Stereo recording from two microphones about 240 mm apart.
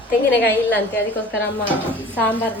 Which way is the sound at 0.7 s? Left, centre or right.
Centre.